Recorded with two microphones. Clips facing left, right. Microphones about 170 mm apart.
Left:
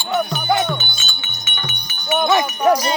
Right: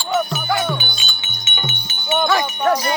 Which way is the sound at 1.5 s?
25° right (ahead or behind).